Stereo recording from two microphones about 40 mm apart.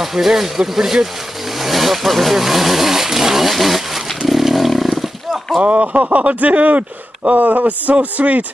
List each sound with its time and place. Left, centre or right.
0.0 s speech: centre
1.6 s speech: centre
4.3 s chainsaw: centre
5.6 s speech: right